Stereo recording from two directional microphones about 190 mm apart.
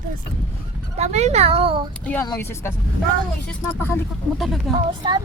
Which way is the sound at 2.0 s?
10° left (ahead or behind).